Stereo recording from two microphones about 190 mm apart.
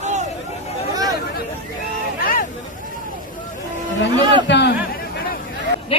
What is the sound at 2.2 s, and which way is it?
Hubbub, 50° left (ahead or behind).